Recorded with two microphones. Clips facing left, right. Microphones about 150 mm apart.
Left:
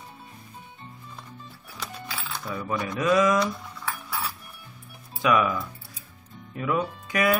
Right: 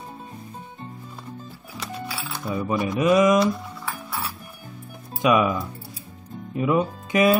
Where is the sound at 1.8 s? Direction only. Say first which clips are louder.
Right 4 dB; 5° right (ahead or behind).